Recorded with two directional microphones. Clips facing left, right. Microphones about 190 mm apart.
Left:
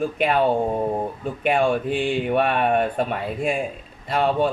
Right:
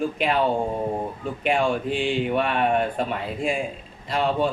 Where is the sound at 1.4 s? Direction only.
50° left (ahead or behind).